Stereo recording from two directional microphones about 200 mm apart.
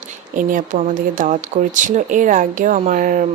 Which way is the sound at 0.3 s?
40° right (ahead or behind).